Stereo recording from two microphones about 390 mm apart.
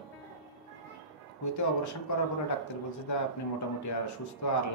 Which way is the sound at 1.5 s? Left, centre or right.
Left.